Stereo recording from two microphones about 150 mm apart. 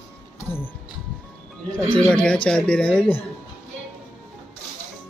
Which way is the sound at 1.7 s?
5° left (ahead or behind).